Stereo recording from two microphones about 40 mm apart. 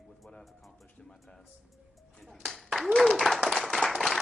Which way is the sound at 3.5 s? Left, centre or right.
Centre.